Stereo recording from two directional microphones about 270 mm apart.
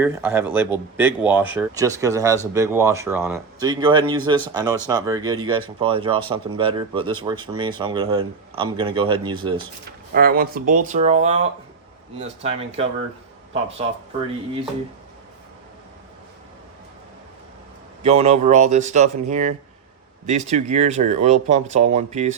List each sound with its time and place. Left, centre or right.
0.0 s speech: centre
10.2 s speech: right
18.0 s speech: right